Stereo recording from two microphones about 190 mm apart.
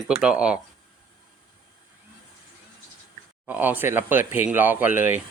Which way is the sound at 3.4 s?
10° right (ahead or behind).